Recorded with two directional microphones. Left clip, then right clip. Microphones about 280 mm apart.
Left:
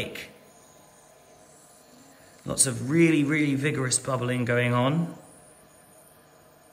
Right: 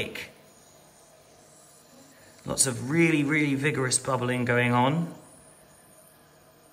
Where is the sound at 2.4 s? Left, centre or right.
Centre.